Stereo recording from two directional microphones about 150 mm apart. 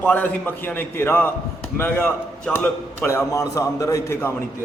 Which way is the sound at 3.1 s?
20° left (ahead or behind).